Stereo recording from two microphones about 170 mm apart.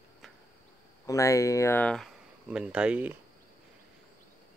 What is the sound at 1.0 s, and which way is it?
Speech, 20° left (ahead or behind).